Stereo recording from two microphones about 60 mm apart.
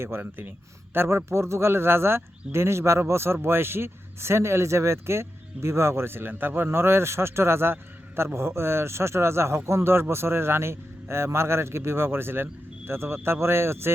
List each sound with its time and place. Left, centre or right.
0.2 s speech: right
0.9 s speech: right